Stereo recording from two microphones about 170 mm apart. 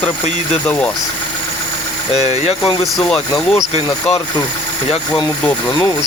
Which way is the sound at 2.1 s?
40° left (ahead or behind).